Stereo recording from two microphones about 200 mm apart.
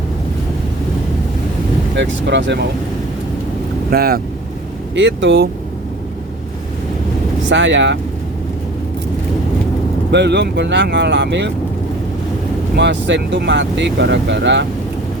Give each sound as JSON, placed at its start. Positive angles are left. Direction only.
{"t": 2.0, "sound": "speech", "side_deg": -60}
{"t": 3.9, "sound": "speech", "side_deg": -50}
{"t": 4.9, "sound": "speech", "side_deg": -65}
{"t": 7.5, "sound": "speech", "side_deg": -65}
{"t": 10.1, "sound": "speech", "side_deg": -60}
{"t": 12.7, "sound": "speech", "side_deg": -60}